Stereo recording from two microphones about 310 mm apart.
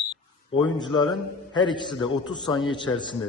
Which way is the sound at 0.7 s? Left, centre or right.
Centre.